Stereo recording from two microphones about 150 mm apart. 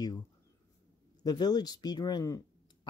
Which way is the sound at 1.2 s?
25° left (ahead or behind).